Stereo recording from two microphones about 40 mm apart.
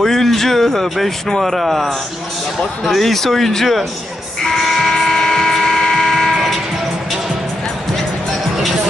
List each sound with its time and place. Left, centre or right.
0.0 s a man's voice: centre
4.4 s music: centre
5.1 s ratchet: centre